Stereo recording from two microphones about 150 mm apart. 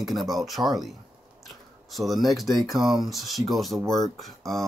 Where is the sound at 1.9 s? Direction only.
Centre (ahead or behind).